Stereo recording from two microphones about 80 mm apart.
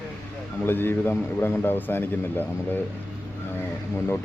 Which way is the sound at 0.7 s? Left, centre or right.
Left.